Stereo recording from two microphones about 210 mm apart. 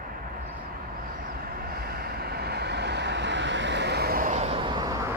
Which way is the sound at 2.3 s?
50° right (ahead or behind).